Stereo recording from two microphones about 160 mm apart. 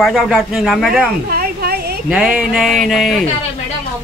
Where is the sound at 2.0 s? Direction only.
5° right (ahead or behind).